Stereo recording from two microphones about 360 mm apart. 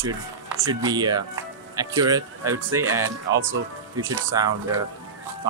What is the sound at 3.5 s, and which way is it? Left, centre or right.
Speech, right.